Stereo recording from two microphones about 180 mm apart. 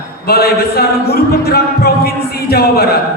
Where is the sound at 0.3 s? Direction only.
60° left (ahead or behind).